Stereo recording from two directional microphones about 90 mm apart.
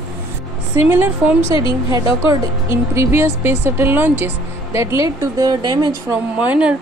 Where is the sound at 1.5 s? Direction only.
65° left (ahead or behind).